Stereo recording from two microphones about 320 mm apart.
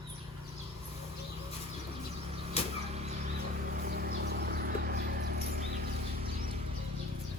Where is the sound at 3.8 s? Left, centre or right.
Right.